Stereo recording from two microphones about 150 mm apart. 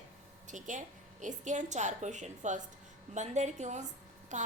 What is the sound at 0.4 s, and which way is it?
A woman's voice, 55° right (ahead or behind).